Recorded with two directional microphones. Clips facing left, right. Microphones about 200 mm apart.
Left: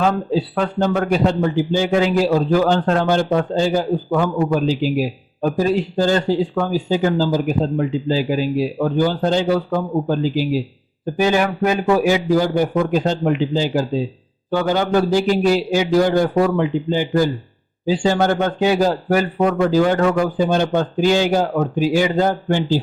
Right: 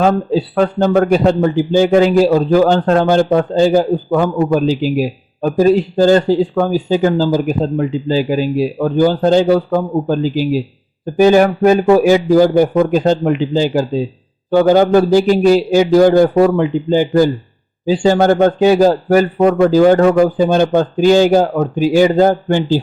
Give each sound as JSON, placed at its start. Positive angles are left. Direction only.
{"t": 0.0, "sound": "a man's voice", "side_deg": -40}